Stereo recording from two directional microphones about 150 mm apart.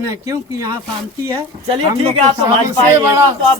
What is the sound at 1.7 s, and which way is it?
Speech, 40° right (ahead or behind).